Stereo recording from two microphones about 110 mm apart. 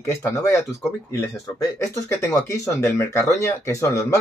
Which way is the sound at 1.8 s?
30° left (ahead or behind).